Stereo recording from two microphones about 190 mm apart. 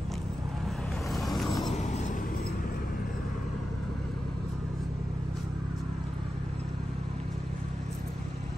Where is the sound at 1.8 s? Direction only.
35° left (ahead or behind).